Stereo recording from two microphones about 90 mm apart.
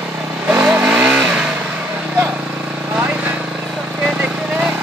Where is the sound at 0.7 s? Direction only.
15° right (ahead or behind).